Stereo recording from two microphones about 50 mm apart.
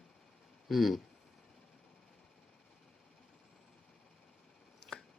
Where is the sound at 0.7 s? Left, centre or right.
Centre.